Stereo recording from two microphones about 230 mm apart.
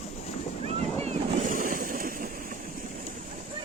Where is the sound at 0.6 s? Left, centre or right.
Right.